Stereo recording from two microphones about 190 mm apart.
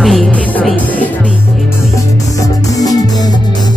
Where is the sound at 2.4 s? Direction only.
20° left (ahead or behind).